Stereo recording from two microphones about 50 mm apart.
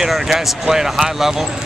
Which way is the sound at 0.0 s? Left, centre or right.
Centre.